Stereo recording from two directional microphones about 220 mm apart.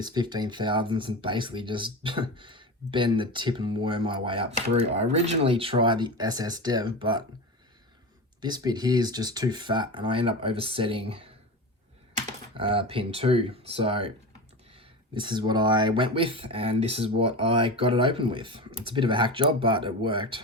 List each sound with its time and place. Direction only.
0.0 s speech: 20° right (ahead or behind)
8.4 s speech: 20° right (ahead or behind)
12.5 s speech: 25° right (ahead or behind)